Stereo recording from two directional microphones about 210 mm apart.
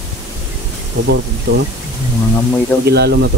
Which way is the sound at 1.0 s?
60° right (ahead or behind).